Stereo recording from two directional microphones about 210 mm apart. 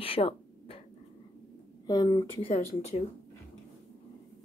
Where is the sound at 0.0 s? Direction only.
25° left (ahead or behind).